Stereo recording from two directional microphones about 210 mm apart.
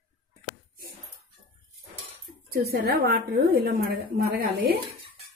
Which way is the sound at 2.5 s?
45° right (ahead or behind).